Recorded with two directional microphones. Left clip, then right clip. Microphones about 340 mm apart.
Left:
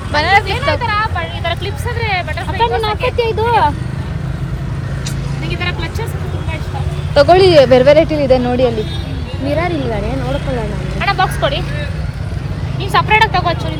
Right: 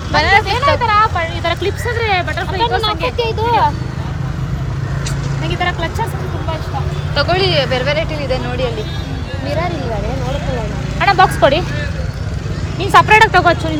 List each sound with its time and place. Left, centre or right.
0.2 s vehicle: centre
0.4 s speech: right
2.6 s speech: left
5.5 s speech: centre
7.1 s speech: centre
11.0 s vehicle: right
12.9 s speech: right